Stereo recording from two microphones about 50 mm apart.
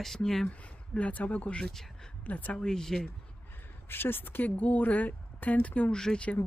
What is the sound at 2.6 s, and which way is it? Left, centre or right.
Speech, centre.